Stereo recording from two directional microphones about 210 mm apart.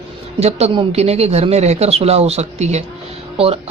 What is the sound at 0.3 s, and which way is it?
Speech, 30° right (ahead or behind).